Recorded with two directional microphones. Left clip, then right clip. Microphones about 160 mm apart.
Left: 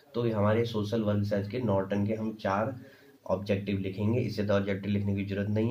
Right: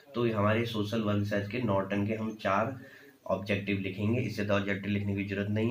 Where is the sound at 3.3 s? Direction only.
75° left (ahead or behind).